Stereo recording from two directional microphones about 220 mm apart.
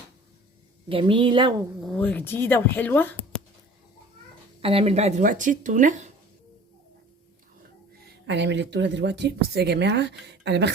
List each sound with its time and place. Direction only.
0.9 s a woman's voice: 25° right (ahead or behind)
1.8 s speech: 5° left (ahead or behind)
4.6 s speech: 25° right (ahead or behind)
8.0 s speech: 50° right (ahead or behind)